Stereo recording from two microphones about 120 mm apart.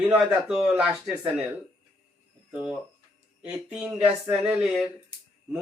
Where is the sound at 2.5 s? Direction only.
10° right (ahead or behind).